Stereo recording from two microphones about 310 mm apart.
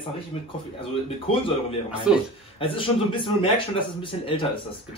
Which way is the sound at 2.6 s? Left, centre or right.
Centre.